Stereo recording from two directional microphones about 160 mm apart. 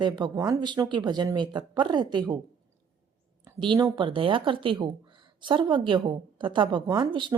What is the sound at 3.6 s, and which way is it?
Speech, 25° right (ahead or behind).